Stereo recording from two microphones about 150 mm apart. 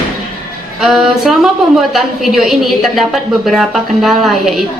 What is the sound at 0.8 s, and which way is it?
A woman's voice, centre (ahead or behind).